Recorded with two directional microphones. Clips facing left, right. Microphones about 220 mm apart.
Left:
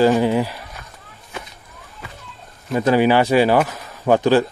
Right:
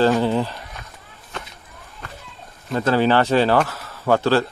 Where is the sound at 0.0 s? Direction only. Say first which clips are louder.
Left 2 dB; 10° left (ahead or behind).